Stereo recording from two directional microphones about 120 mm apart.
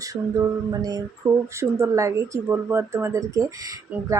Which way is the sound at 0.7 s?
35° right (ahead or behind).